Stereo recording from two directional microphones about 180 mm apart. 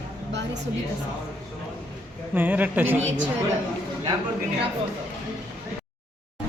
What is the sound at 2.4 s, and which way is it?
Speech, 10° right (ahead or behind).